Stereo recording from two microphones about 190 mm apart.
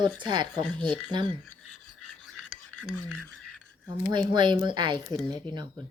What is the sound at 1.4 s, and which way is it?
Filing, 5° left (ahead or behind).